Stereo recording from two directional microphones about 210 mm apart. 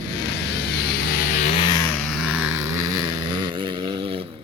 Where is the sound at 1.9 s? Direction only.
Centre (ahead or behind); by 4.3 s 25° right (ahead or behind).